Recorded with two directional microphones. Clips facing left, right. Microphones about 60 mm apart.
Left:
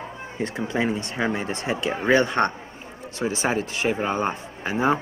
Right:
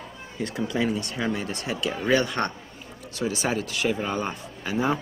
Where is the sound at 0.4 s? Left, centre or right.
Left.